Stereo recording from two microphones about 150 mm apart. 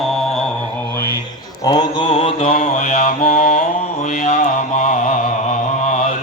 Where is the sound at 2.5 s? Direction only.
55° left (ahead or behind).